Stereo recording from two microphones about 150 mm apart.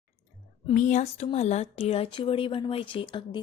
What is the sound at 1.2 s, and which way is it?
A woman's voice, 45° left (ahead or behind).